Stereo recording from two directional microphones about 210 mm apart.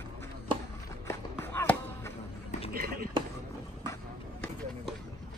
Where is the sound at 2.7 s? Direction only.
45° right (ahead or behind).